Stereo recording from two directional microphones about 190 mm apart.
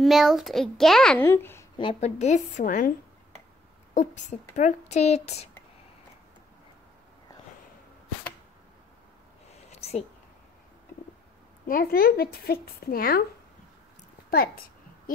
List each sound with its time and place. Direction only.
0.0 s a child's voice: centre (ahead or behind)
1.8 s speech: 30° left (ahead or behind)
3.9 s speech: 40° left (ahead or behind)
9.5 s a sound: 35° left (ahead or behind)
11.6 s a woman's voice: 50° left (ahead or behind)
14.3 s a woman's voice: 50° left (ahead or behind)